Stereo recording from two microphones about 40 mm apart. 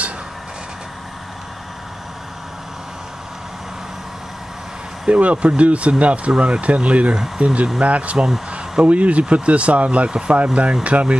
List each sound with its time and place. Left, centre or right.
5.0 s speech: right
7.8 s speech: right